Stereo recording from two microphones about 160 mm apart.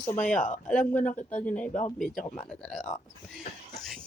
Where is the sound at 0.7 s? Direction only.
10° left (ahead or behind).